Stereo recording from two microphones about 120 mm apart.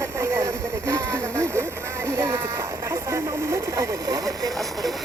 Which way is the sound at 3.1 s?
25° right (ahead or behind).